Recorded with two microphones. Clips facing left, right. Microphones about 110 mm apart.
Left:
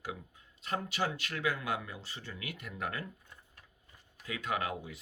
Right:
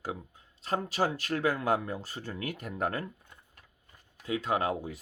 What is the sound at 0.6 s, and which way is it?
Speech, 35° right (ahead or behind).